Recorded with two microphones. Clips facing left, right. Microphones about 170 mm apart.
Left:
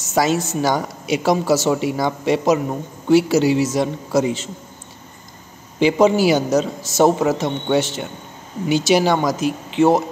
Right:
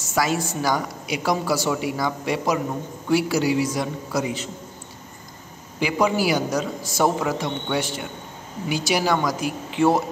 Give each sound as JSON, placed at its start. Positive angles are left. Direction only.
{"t": 0.0, "sound": "a woman's voice", "side_deg": 20}
{"t": 5.8, "sound": "a woman's voice", "side_deg": 25}